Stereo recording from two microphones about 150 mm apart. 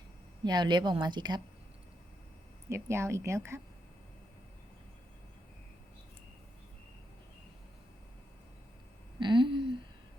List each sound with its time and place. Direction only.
0.4 s speech: 30° right (ahead or behind)
2.6 s speech: 20° right (ahead or behind)
9.1 s a sound: 30° right (ahead or behind)